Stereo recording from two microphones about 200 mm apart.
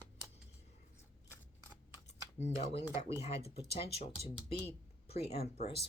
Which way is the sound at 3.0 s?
30° left (ahead or behind).